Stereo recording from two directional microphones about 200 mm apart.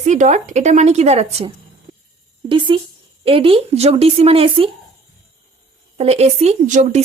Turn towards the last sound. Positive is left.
turn(degrees=-35)  # may be behind; listen again after turning